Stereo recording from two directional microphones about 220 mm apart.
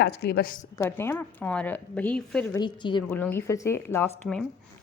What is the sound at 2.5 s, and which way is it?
Speech, 20° left (ahead or behind).